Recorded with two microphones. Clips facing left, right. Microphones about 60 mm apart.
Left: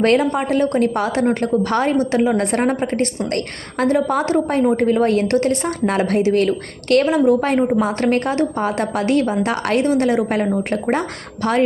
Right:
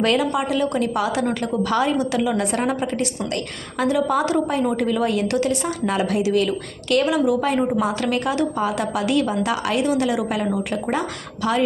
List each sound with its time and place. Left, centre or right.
0.0 s a woman's voice: left
7.7 s a woman's voice: left
8.0 s a woman's voice: left